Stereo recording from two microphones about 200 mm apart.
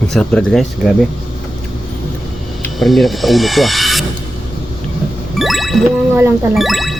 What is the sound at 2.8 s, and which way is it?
Speech, centre (ahead or behind).